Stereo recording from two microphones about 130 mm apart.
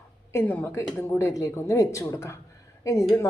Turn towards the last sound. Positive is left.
turn(degrees=25)  # may be behind; listen again after turning